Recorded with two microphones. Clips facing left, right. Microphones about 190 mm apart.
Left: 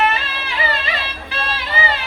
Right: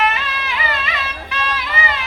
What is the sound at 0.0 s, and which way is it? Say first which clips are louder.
Music: left 1 dB; 30° left (ahead or behind).